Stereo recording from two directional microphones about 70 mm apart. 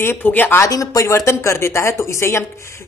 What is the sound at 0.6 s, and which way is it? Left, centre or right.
Speech, left.